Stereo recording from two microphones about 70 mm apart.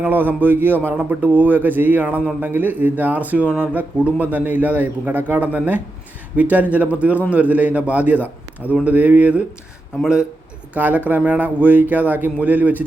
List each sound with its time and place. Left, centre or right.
0.0 s speech: right
10.8 s speech: right